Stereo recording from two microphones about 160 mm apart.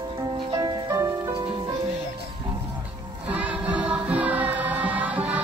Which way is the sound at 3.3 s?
10° right (ahead or behind).